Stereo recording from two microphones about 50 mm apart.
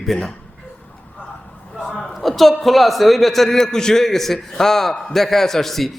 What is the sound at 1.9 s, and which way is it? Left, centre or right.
A man's voice, centre.